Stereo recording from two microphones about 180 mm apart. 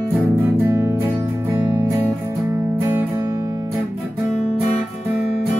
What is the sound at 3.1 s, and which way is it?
Guitar, 20° right (ahead or behind).